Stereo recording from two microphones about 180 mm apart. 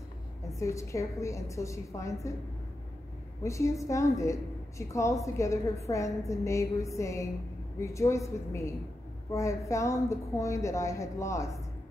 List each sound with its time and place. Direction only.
0.6 s a woman's voice: 15° left (ahead or behind)
3.4 s a woman's voice: 15° left (ahead or behind)